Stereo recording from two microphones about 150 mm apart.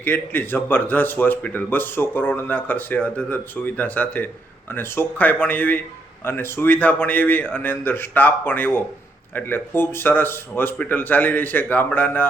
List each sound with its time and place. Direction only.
0.0 s speech: 15° left (ahead or behind)